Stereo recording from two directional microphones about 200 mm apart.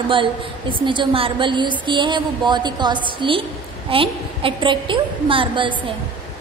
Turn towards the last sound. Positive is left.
turn(degrees=-25)  # may be behind; listen again after turning